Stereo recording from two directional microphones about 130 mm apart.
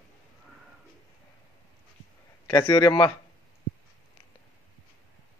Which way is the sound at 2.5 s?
35° left (ahead or behind).